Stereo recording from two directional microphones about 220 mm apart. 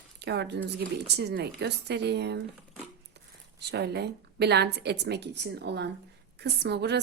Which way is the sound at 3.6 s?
50° right (ahead or behind).